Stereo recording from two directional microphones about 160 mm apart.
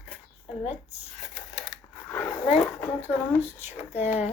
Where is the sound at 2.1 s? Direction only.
15° left (ahead or behind).